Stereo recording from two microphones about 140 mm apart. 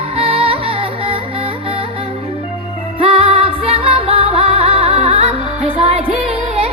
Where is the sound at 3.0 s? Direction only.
40° right (ahead or behind).